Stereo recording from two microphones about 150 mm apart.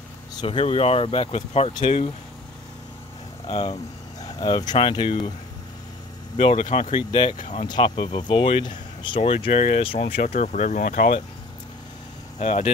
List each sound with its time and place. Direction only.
0.3 s speech: 35° left (ahead or behind)
1.7 s speech: 30° left (ahead or behind)
3.4 s speech: 35° left (ahead or behind)
6.3 s speech: 35° left (ahead or behind)
10.3 s speech: 55° left (ahead or behind)
12.4 s speech: 45° left (ahead or behind)